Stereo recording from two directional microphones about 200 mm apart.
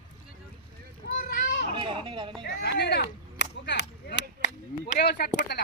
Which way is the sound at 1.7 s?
25° right (ahead or behind).